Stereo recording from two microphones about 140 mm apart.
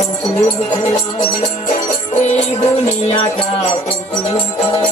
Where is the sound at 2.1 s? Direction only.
55° left (ahead or behind).